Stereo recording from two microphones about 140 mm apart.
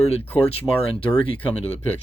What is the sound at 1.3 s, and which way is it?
Speech, 10° left (ahead or behind).